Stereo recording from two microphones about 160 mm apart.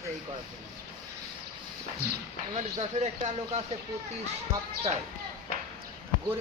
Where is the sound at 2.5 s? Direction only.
45° right (ahead or behind).